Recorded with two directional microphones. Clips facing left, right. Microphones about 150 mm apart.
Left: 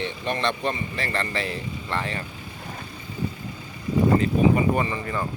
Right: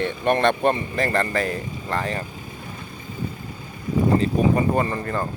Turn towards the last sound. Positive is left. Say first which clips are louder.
# right 2 dB
turn(degrees=-45)  # may be behind; listen again after turning